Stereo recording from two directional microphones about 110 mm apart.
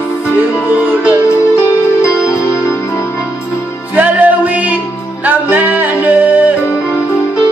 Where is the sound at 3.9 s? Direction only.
15° right (ahead or behind).